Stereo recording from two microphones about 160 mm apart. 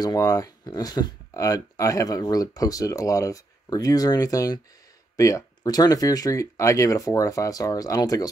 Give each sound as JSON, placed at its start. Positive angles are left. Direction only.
{"t": 0.0, "sound": "speech", "side_deg": 20}